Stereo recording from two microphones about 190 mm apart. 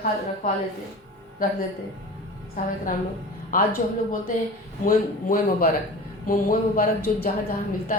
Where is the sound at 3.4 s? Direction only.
50° left (ahead or behind).